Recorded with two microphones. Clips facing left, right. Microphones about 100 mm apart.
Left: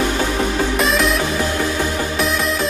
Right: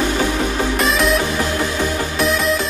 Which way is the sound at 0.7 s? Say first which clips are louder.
Right 2 dB; centre (ahead or behind).